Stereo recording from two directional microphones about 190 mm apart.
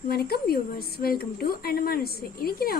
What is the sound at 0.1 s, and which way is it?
A woman's voice, 55° left (ahead or behind).